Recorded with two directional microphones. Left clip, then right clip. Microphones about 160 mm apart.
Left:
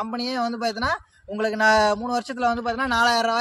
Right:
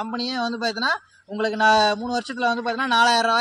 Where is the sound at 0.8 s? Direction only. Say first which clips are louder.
Right 2 dB; 35° left (ahead or behind).